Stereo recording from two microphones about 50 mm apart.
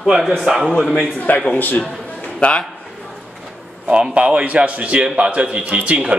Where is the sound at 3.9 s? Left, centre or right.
Right.